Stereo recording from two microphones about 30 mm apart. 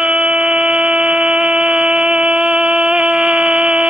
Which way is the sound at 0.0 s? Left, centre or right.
Right.